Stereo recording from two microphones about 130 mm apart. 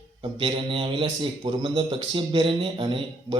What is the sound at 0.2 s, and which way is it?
Speech, 40° right (ahead or behind).